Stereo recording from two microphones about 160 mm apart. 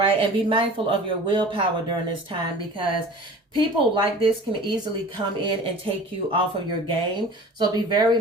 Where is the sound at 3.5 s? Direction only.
30° right (ahead or behind).